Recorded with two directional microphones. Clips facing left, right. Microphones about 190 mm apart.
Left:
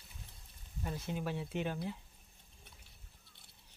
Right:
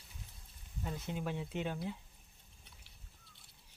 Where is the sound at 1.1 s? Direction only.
15° right (ahead or behind).